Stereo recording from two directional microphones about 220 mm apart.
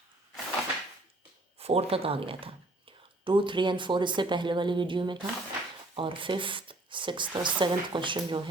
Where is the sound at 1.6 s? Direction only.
25° right (ahead or behind).